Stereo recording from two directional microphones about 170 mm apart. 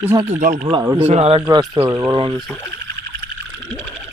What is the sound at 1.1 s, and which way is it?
Speech, 35° right (ahead or behind).